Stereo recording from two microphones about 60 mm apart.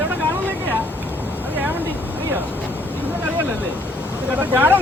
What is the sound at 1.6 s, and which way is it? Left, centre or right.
Vehicle, right.